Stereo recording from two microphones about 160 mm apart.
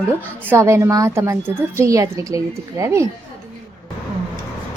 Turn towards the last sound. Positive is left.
turn(degrees=-20)  # may be behind; listen again after turning